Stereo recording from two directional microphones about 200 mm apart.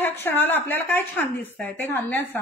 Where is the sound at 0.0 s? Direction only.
10° left (ahead or behind).